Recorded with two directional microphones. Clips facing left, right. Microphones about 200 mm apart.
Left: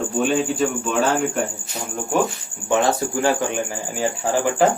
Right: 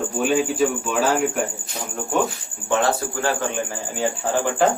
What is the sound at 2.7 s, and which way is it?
A man's voice, 15° left (ahead or behind).